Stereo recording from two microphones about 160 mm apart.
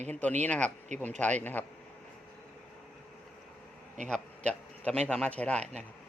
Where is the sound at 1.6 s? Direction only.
10° left (ahead or behind).